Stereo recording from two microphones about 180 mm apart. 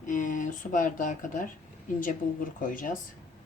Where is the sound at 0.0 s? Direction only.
45° left (ahead or behind).